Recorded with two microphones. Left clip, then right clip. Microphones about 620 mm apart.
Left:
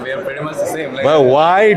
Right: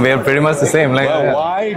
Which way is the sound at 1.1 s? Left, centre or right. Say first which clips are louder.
Left 5 dB; left.